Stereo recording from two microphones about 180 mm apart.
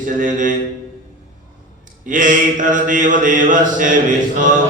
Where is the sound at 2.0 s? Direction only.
45° right (ahead or behind).